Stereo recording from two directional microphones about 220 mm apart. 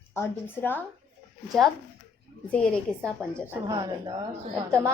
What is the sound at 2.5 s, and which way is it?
Speech, 5° left (ahead or behind).